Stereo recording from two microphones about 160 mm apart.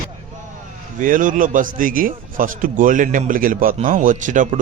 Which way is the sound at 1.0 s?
55° right (ahead or behind).